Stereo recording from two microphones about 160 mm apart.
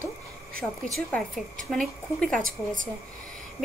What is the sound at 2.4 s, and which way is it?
Speech, 55° right (ahead or behind).